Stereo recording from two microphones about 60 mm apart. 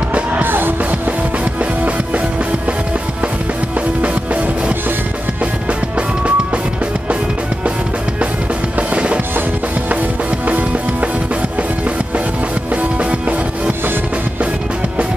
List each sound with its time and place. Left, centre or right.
0.1 s music: right
4.0 s music: right
5.9 s drum: right
8.7 s music: right
10.4 s music: right
12.7 s music: right